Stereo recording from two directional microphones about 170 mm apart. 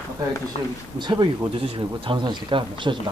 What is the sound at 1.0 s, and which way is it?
Speech, 25° right (ahead or behind).